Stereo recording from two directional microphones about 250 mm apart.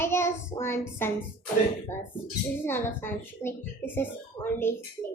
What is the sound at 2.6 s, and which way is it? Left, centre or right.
A child's voice, centre.